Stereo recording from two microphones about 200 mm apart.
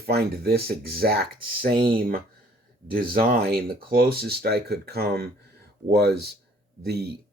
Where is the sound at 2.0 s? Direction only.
45° right (ahead or behind).